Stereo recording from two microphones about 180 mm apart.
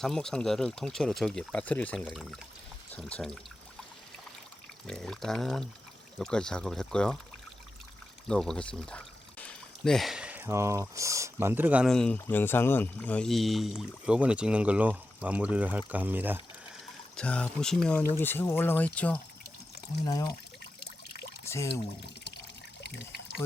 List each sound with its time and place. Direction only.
0.0 s speech: centre (ahead or behind)
4.9 s speech: centre (ahead or behind)
8.3 s speech: 5° left (ahead or behind)
17.2 s speech: 5° left (ahead or behind)
21.4 s pour: 15° left (ahead or behind)
22.8 s pour: 70° left (ahead or behind)